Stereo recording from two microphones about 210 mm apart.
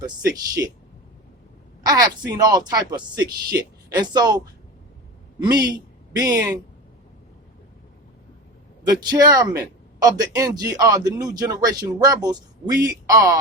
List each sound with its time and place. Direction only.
0.0 s speech: 15° right (ahead or behind)
1.8 s a man's voice: 20° right (ahead or behind)
8.9 s speech: 20° right (ahead or behind)